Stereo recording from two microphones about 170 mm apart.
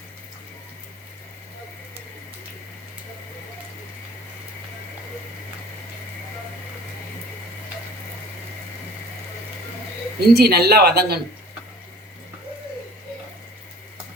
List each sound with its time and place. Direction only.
10.2 s speech: 70° right (ahead or behind)